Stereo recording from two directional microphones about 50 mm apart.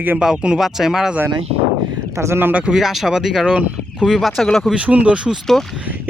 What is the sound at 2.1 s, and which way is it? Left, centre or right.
Speech, right.